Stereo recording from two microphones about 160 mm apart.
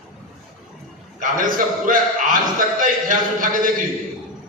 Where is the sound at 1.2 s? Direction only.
55° right (ahead or behind).